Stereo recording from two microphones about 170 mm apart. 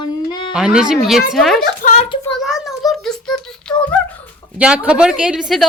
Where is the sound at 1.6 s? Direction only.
50° left (ahead or behind).